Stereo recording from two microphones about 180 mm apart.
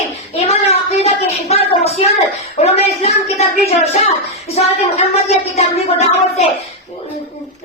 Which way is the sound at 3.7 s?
35° left (ahead or behind).